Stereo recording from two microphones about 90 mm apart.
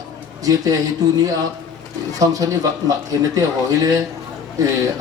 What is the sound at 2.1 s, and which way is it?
Speech, 40° right (ahead or behind).